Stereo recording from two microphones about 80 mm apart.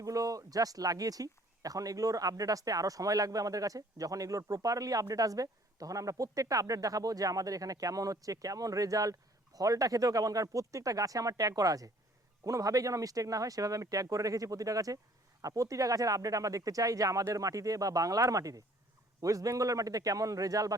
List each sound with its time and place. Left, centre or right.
0.0 s speech: right